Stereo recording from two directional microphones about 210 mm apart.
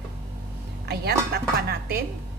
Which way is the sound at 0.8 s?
50° right (ahead or behind).